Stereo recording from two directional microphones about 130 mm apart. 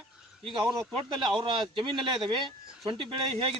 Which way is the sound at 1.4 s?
40° right (ahead or behind).